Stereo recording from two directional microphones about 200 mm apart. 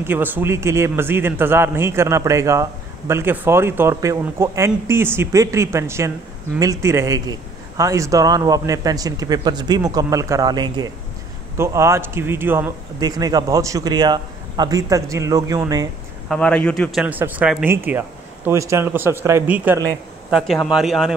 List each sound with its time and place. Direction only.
0.0 s speech: 10° right (ahead or behind)
16.3 s speech: 5° left (ahead or behind)